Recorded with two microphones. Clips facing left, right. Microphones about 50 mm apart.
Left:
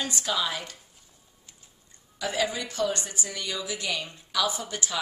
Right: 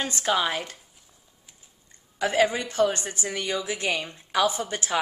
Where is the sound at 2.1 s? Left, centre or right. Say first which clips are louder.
Right 6 dB; right.